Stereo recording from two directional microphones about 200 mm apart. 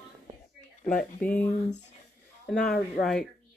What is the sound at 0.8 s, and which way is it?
Speech, 5° left (ahead or behind).